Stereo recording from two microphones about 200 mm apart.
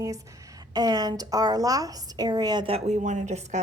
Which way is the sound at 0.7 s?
20° right (ahead or behind).